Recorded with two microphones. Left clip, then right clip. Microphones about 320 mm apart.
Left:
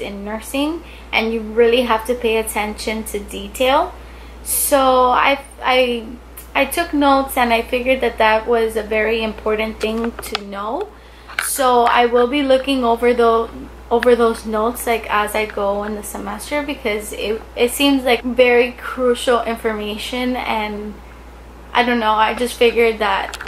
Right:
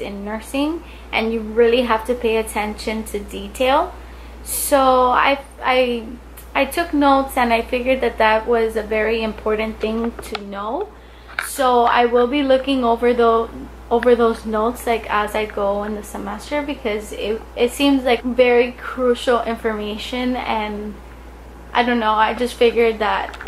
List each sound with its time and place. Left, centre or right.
0.0 s a woman's voice: centre
10.6 s speech: centre
11.8 s a woman's voice: centre
13.4 s speech: centre
14.9 s a woman's voice: centre
15.6 s speech: centre
16.1 s a woman's voice: centre
21.7 s a woman's voice: centre